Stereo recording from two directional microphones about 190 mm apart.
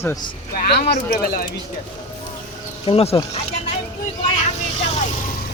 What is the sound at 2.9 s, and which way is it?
Speech, 30° left (ahead or behind).